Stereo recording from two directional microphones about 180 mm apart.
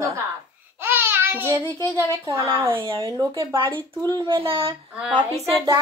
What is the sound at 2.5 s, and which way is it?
A woman's voice, 30° right (ahead or behind).